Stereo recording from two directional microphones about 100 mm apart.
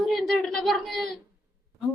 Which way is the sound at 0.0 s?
Centre (ahead or behind).